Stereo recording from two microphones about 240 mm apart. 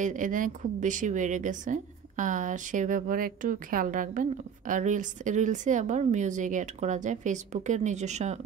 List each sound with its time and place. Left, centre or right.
0.0 s a woman's voice: right